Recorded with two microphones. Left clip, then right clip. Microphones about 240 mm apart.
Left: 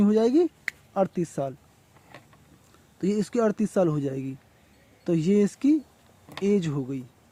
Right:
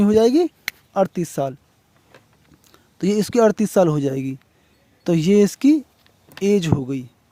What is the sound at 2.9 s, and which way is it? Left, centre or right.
Speech, right.